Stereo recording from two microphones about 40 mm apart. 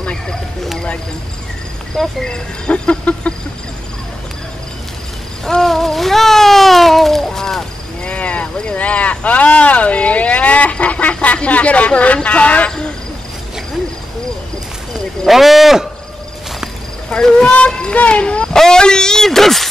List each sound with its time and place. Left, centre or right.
2.2 s speech: centre
2.7 s speech: left
5.4 s a sound: centre
8.0 s a sound: left
11.3 s speech: left
15.2 s speech: centre
17.6 s speech: left
18.5 s speech: centre